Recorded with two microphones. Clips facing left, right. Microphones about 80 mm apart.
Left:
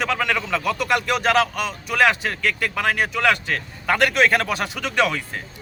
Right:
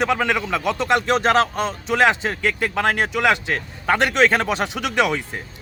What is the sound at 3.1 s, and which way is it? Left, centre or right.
Speech, centre.